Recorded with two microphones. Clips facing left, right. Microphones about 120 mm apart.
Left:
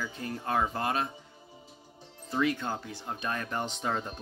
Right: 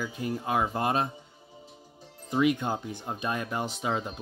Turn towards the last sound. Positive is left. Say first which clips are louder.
# right 2 dB
turn(degrees=-5)  # may be behind; listen again after turning